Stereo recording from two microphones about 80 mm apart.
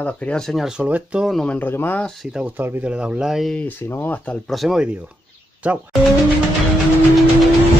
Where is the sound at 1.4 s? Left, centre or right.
Centre.